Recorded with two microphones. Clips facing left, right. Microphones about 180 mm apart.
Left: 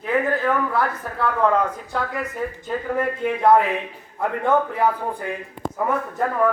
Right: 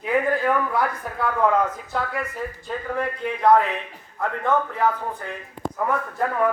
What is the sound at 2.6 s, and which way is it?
A man's voice, 5° left (ahead or behind).